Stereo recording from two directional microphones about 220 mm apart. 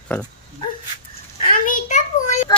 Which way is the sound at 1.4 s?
35° left (ahead or behind).